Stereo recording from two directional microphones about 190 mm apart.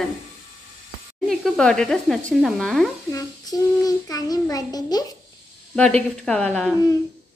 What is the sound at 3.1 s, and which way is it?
Child singing, 20° left (ahead or behind).